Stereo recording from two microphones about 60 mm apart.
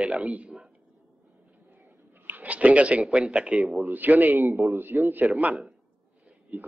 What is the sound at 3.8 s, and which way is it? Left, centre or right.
A man's voice, right.